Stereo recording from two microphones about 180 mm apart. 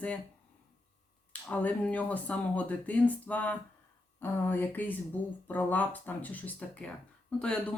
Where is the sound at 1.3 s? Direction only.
10° left (ahead or behind).